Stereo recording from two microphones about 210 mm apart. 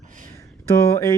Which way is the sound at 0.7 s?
15° left (ahead or behind).